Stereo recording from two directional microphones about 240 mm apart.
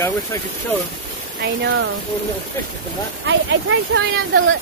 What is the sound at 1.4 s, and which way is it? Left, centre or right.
Speech, right.